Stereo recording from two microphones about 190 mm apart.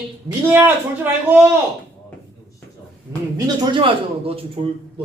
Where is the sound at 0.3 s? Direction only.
10° right (ahead or behind).